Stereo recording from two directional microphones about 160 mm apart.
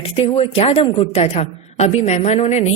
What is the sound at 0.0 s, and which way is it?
A woman's voice, 35° left (ahead or behind).